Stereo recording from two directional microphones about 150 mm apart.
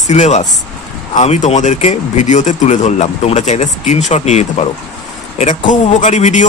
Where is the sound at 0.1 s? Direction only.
50° left (ahead or behind).